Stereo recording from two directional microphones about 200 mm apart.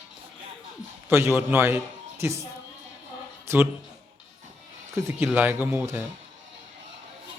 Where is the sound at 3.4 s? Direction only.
10° right (ahead or behind).